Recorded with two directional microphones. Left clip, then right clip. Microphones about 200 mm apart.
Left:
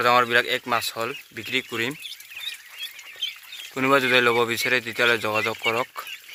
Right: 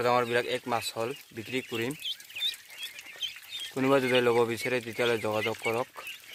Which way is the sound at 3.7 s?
5° right (ahead or behind).